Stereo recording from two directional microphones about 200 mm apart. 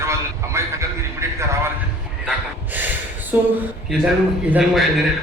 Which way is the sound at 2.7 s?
10° right (ahead or behind).